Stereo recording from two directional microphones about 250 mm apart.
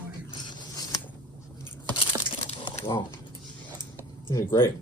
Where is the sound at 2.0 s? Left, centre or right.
Left.